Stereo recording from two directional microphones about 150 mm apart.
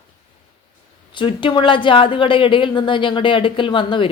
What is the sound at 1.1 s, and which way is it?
Speech, 35° left (ahead or behind).